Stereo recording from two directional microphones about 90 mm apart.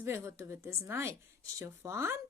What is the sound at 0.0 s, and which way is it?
A woman's voice, 30° right (ahead or behind).